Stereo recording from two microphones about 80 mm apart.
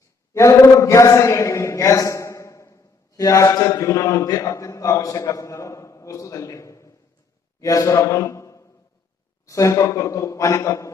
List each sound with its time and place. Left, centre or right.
0.3 s a man's voice: left